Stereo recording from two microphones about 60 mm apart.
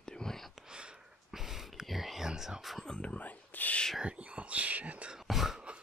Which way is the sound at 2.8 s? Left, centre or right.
Centre.